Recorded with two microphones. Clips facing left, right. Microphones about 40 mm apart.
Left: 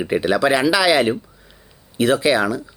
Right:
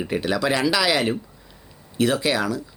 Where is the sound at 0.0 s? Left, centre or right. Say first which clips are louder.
Left 5 dB; centre.